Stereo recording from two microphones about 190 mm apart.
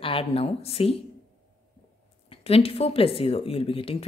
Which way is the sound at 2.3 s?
30° left (ahead or behind).